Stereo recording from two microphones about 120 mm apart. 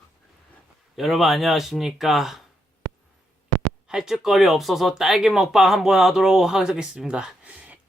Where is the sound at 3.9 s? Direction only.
5° right (ahead or behind).